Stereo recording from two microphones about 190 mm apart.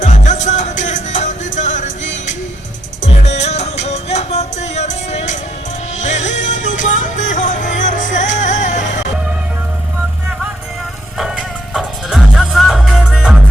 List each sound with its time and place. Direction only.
0.0 s music: 40° left (ahead or behind)
11.2 s music: centre (ahead or behind)